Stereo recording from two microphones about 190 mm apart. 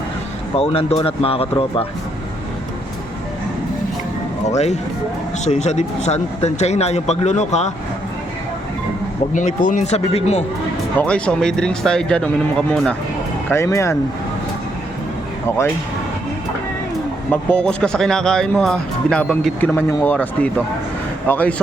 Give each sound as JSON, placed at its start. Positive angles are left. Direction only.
{"t": 0.5, "sound": "speech", "side_deg": 30}
{"t": 4.4, "sound": "speech", "side_deg": 35}
{"t": 9.3, "sound": "speech", "side_deg": 40}
{"t": 10.9, "sound": "speech", "side_deg": 5}
{"t": 13.5, "sound": "speech", "side_deg": 15}
{"t": 17.3, "sound": "speech", "side_deg": 5}